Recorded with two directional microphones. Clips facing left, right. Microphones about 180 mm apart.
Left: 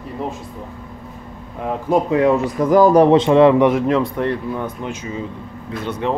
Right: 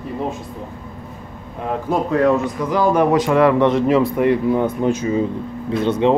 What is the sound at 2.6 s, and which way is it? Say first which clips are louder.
Speech: left 8 dB; 45° left (ahead or behind).